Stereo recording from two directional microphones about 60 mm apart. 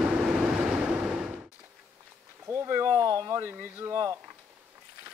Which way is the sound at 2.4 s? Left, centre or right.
Right.